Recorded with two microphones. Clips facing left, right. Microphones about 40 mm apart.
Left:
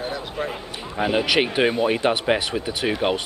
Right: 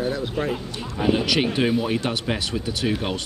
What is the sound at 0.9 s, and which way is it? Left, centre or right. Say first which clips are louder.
Speech: left 1 dB; left.